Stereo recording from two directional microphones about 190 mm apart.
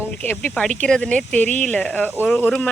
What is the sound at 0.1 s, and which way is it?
Speech, 10° left (ahead or behind).